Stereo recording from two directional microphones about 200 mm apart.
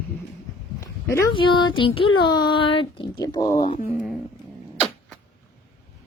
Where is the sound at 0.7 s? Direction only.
15° left (ahead or behind).